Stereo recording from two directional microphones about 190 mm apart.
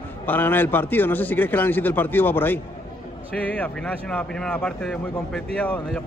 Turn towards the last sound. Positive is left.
turn(degrees=5)  # may be behind; listen again after turning